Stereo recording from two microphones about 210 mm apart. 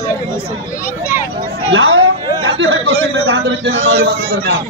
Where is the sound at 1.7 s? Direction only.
75° right (ahead or behind).